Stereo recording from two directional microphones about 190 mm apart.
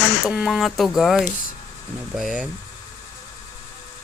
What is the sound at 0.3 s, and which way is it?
Speech, centre (ahead or behind).